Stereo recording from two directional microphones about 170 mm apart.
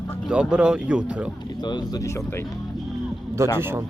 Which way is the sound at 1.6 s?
25° left (ahead or behind).